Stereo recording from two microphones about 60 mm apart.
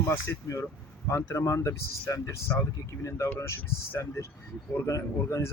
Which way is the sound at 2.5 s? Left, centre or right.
Left.